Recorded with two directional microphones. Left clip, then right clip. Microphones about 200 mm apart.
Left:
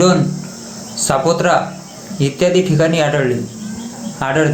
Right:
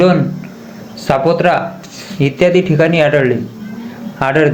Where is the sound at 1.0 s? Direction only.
5° right (ahead or behind).